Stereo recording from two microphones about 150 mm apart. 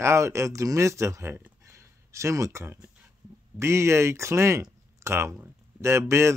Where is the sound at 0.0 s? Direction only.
20° right (ahead or behind).